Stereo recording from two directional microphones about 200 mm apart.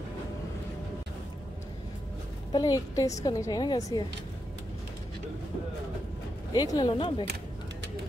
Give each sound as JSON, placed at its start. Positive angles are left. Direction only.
{"t": 2.5, "sound": "a woman's voice", "side_deg": 20}
{"t": 6.5, "sound": "a woman's voice", "side_deg": 20}